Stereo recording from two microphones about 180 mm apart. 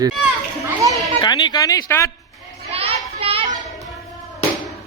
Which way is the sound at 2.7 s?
30° right (ahead or behind).